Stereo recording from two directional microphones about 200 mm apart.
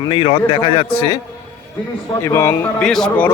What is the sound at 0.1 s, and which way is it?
Speech, 30° left (ahead or behind).